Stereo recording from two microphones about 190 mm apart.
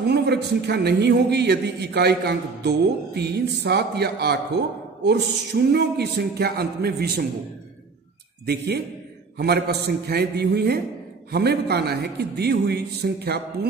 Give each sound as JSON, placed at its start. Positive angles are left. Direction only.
{"t": 0.1, "sound": "a man's voice", "side_deg": -60}
{"t": 8.5, "sound": "a man's voice", "side_deg": -60}